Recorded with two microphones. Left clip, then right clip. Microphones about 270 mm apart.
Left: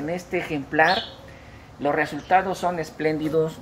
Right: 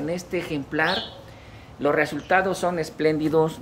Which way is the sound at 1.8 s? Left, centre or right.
Centre.